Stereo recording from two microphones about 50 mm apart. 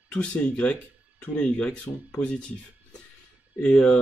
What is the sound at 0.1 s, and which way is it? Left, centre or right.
Speech, left.